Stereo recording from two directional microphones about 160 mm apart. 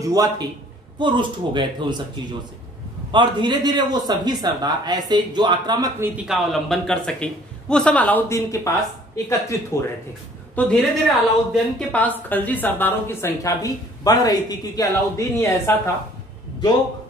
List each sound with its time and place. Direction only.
0.0 s a man's voice: 25° right (ahead or behind)
3.1 s a man's voice: 30° right (ahead or behind)
5.9 s a woman's voice: 5° right (ahead or behind); by 9.8 s 20° left (ahead or behind)
10.5 s a woman's voice: 5° left (ahead or behind)
11.9 s a woman's voice: 10° left (ahead or behind)